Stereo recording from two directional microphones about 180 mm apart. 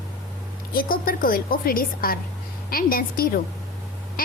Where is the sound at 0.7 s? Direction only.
55° left (ahead or behind).